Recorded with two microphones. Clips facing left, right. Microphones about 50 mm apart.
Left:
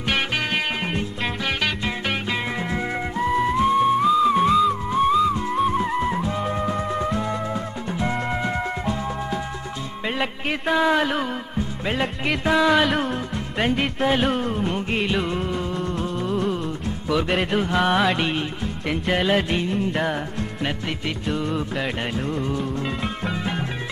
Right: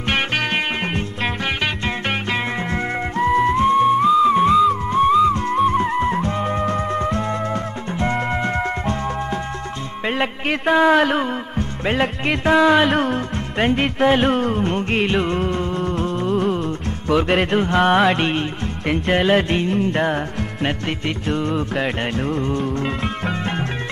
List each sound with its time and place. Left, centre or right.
3.3 s music: centre
5.3 s music: centre
10.0 s music: right
19.7 s music: centre
21.4 s music: centre